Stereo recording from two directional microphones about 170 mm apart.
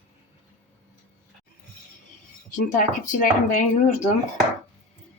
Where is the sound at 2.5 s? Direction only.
50° left (ahead or behind).